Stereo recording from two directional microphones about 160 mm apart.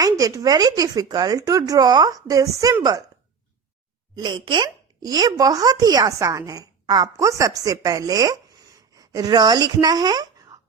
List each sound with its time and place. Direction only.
0.0 s speech: 25° right (ahead or behind)
4.1 s speech: 25° right (ahead or behind)